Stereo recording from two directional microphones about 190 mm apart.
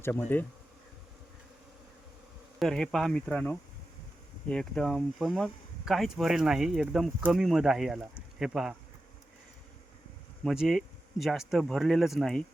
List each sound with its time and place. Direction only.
0.0 s bee: 10° left (ahead or behind)
2.6 s speech: 5° left (ahead or behind)
10.4 s speech: centre (ahead or behind)